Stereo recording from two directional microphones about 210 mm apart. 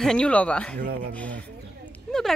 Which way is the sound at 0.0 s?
5° left (ahead or behind).